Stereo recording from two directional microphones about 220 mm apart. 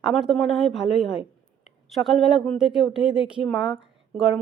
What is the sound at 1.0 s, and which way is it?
Speech, 25° left (ahead or behind).